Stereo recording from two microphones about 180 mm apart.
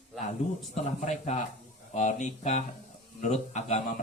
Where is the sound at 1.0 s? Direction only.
40° left (ahead or behind).